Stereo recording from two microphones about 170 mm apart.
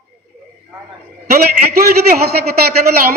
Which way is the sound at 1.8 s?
65° right (ahead or behind).